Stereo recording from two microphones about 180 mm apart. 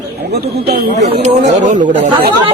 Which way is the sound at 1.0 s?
40° right (ahead or behind).